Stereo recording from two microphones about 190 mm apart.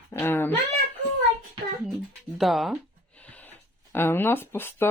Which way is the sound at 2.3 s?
Centre (ahead or behind).